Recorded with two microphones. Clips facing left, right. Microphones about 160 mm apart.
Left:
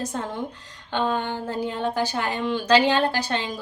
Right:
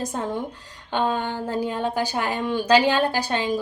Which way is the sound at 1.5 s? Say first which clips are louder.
Right 1 dB; 10° right (ahead or behind).